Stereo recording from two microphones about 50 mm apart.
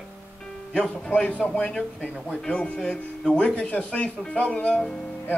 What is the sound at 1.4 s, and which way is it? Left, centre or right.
Speech, centre.